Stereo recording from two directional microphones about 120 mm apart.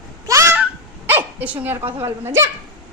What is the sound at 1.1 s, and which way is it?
Speech, 15° right (ahead or behind).